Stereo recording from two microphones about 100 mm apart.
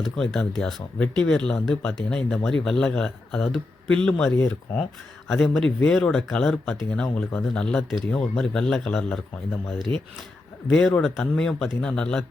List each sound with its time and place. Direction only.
0.0 s speech: 5° left (ahead or behind)
10.7 s speech: 5° left (ahead or behind)